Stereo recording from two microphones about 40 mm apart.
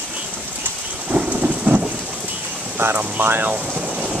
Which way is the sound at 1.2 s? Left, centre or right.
Right.